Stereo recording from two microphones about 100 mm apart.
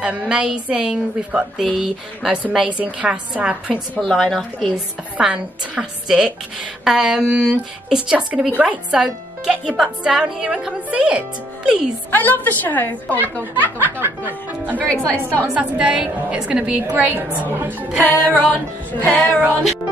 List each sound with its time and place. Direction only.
0.0 s speech: 10° right (ahead or behind)
3.9 s a woman's voice: 5° left (ahead or behind); by 11.8 s 10° right (ahead or behind)
12.1 s a woman's voice: 20° left (ahead or behind)
13.7 s speech: 20° right (ahead or behind)
14.8 s music: 15° left (ahead or behind)
15.5 s speech: 10° right (ahead or behind)
18.0 s music: 15° left (ahead or behind)